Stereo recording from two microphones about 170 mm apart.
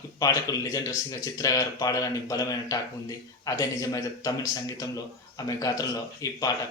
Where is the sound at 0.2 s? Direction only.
20° left (ahead or behind).